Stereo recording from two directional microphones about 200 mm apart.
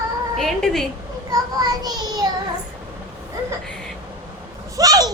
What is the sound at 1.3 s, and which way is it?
A child's voice, 20° right (ahead or behind).